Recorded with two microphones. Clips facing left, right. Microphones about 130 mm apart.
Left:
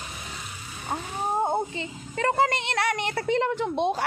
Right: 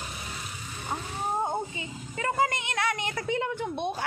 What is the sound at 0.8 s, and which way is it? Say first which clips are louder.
Wild animals: left 3 dB; 30° left (ahead or behind).